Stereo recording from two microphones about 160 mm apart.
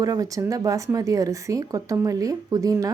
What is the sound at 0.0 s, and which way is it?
Speech, 20° right (ahead or behind).